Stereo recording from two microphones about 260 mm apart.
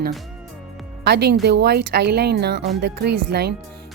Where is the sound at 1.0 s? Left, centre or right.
Right.